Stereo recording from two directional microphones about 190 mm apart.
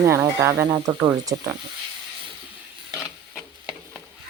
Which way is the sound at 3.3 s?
Centre (ahead or behind).